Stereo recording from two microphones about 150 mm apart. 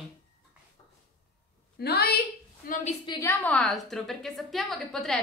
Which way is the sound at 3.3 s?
10° left (ahead or behind).